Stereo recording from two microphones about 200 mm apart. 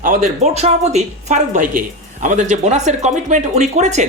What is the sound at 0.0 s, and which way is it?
A woman's voice, 35° right (ahead or behind).